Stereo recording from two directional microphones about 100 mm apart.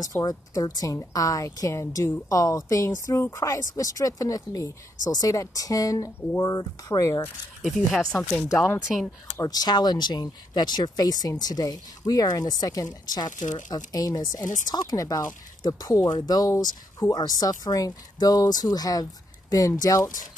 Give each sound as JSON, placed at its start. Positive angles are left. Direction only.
{"t": 0.0, "sound": "speech", "side_deg": 40}
{"t": 7.6, "sound": "speech", "side_deg": 0}
{"t": 9.4, "sound": "speech", "side_deg": 40}